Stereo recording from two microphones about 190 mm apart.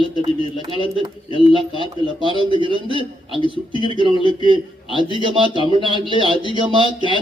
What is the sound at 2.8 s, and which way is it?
A man's voice, 25° left (ahead or behind).